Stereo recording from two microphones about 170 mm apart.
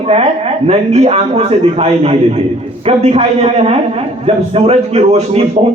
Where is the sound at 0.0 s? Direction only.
40° right (ahead or behind).